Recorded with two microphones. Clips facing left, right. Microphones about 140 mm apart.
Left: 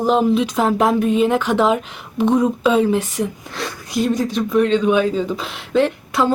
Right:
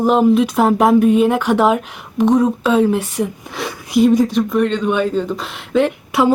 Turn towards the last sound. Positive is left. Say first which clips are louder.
# right 2 dB
turn(degrees=-5)  # may be behind; listen again after turning